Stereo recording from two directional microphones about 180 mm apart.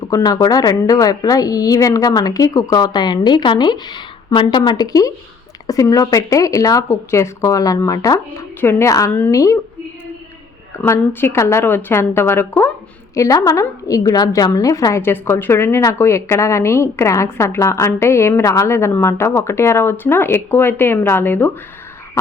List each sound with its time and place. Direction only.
0.1 s a woman's voice: 20° left (ahead or behind)
10.8 s a woman's voice: 15° left (ahead or behind)